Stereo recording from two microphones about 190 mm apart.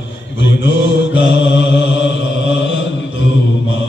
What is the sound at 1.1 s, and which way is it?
Mantra, 75° left (ahead or behind).